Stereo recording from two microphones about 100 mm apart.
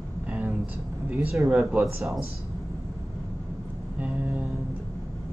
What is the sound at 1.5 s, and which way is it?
Speech, 10° right (ahead or behind).